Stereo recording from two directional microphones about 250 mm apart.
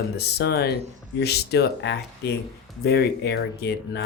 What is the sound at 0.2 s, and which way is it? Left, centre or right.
Speech, left.